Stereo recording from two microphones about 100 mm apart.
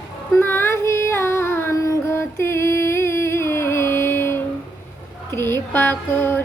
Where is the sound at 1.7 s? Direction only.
30° left (ahead or behind).